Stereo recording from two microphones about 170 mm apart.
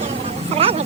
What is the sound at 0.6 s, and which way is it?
Vehicle, 35° right (ahead or behind).